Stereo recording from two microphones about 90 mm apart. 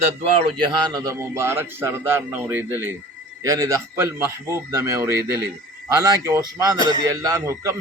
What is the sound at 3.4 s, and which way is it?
A man's voice, 35° right (ahead or behind).